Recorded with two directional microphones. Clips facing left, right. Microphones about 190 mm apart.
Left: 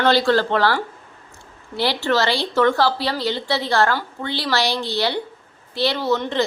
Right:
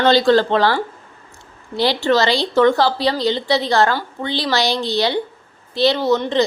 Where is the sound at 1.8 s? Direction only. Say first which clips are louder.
Right 4 dB; 15° right (ahead or behind).